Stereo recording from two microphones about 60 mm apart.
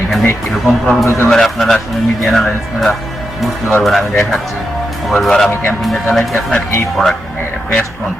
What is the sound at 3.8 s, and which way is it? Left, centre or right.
Speech, centre.